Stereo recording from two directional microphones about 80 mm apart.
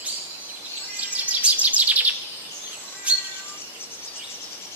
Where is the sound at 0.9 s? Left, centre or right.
Centre.